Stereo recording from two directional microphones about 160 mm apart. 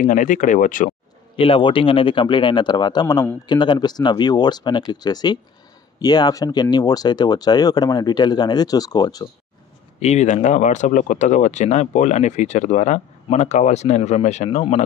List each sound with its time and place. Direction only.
0.0 s speech: 55° left (ahead or behind)
1.3 s speech: 35° left (ahead or behind)
9.9 s speech: 45° left (ahead or behind)